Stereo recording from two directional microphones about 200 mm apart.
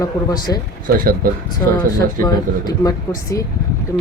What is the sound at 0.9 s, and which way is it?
Speech, 45° right (ahead or behind).